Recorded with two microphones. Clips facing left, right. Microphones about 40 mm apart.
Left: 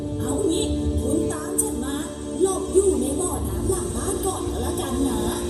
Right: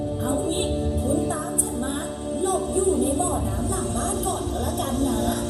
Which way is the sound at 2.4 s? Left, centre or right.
Centre.